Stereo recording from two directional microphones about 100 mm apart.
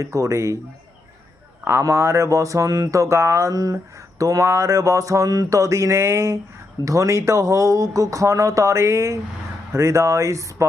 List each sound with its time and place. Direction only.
0.0 s speech: 30° right (ahead or behind)
1.6 s speech: 25° right (ahead or behind)